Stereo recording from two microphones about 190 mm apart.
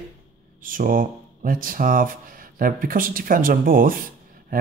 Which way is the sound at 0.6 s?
45° right (ahead or behind).